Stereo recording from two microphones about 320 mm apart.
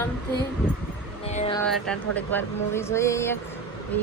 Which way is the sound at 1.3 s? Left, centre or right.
Left.